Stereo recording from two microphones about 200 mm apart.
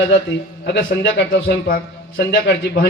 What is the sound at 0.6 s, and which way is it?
A man's voice, 50° left (ahead or behind).